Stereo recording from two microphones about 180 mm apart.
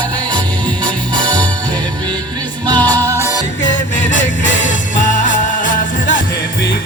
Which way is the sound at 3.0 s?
15° right (ahead or behind).